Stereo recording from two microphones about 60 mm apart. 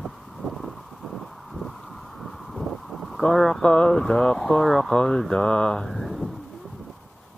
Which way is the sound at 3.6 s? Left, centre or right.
Centre.